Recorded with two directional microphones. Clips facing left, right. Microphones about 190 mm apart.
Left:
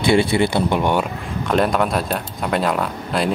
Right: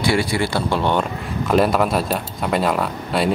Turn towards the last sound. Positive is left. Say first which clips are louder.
# right 1 dB
turn(degrees=0)  # may be behind; listen again after turning